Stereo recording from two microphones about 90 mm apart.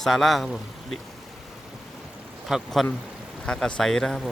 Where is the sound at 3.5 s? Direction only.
10° left (ahead or behind).